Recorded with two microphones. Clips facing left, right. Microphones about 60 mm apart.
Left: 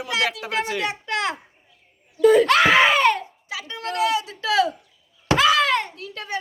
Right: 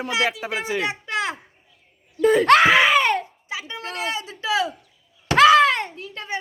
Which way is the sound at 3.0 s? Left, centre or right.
Right.